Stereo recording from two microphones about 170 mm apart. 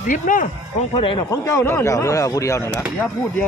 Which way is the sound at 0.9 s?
30° left (ahead or behind).